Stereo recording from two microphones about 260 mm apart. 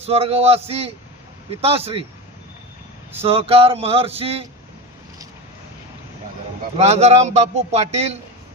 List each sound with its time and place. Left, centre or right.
0.0 s a man's voice: right
3.2 s a man's voice: right
6.7 s a man's voice: right